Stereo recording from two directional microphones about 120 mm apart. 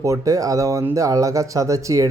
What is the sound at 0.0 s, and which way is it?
Speech, 25° right (ahead or behind).